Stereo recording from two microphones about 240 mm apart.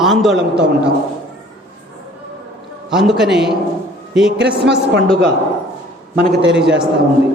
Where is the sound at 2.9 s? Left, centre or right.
Centre.